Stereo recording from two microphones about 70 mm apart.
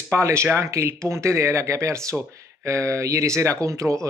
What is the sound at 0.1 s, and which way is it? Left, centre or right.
Speech, right.